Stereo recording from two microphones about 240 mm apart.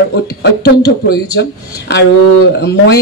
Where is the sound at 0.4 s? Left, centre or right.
Left.